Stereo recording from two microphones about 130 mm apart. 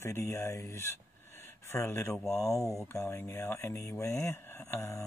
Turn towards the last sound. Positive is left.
turn(degrees=20)  # may be behind; listen again after turning